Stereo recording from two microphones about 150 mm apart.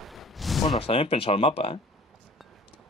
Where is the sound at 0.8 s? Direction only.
40° left (ahead or behind).